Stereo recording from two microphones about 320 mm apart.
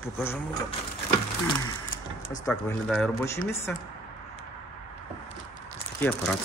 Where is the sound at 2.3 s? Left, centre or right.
Centre.